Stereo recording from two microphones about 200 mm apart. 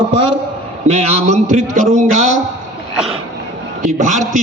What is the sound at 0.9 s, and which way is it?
A man's voice, 30° right (ahead or behind).